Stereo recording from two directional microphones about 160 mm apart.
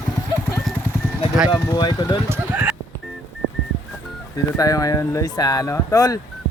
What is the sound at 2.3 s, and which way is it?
Clip-clop, 15° right (ahead or behind).